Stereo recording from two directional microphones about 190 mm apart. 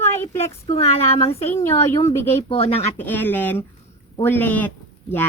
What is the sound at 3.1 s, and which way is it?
A woman's voice, 10° left (ahead or behind).